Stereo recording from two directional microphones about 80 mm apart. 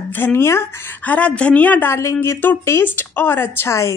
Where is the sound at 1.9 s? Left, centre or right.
Left.